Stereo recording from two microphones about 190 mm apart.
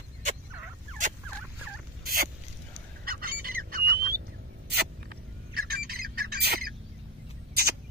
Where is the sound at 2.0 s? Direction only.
50° right (ahead or behind).